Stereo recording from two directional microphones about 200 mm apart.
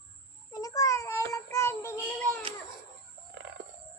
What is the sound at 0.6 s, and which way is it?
Child singing, 15° left (ahead or behind).